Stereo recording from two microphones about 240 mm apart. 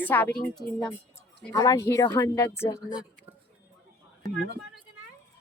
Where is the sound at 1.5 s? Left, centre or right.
Centre.